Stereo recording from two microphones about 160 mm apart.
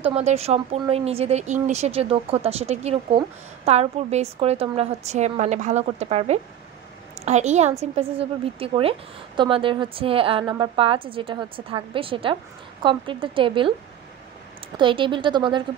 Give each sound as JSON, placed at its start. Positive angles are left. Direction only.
{"t": 0.0, "sound": "a woman's voice", "side_deg": -45}
{"t": 14.8, "sound": "speech", "side_deg": -30}